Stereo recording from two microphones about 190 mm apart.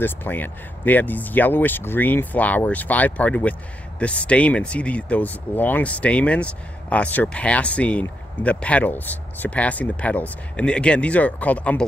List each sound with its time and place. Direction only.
0.0 s speech: 10° left (ahead or behind)